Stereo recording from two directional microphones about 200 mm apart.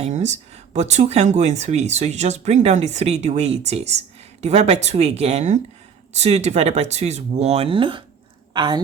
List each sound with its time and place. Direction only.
0.0 s a woman's voice: 35° right (ahead or behind)